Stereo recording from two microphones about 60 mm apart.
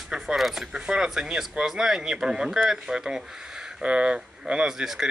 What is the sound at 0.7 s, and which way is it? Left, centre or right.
Speech, centre.